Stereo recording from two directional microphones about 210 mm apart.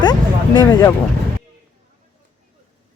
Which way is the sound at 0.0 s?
20° left (ahead or behind).